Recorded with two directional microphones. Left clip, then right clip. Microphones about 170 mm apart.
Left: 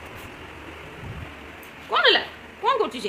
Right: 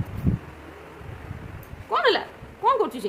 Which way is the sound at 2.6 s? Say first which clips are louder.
Right 1 dB; 30° right (ahead or behind).